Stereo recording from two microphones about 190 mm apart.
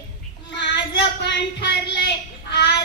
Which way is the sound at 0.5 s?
65° left (ahead or behind).